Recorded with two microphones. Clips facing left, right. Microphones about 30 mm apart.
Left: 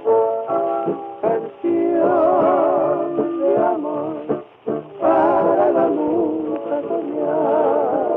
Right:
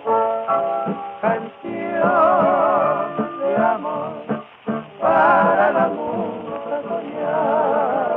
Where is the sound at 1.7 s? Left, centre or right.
Right.